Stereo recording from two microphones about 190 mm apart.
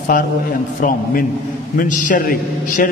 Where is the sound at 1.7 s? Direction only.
45° left (ahead or behind).